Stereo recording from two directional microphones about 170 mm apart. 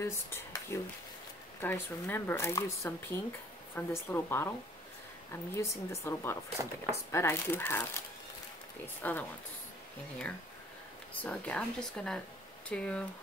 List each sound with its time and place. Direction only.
0.0 s speech: 15° left (ahead or behind)
11.1 s speech: 10° left (ahead or behind)